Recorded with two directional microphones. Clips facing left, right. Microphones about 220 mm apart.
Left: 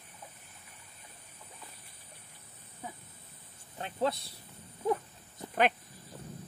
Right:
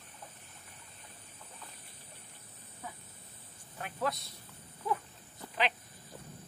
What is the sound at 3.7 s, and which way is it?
Speech, 25° left (ahead or behind).